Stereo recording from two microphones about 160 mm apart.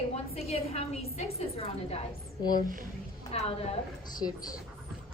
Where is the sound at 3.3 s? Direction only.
40° left (ahead or behind).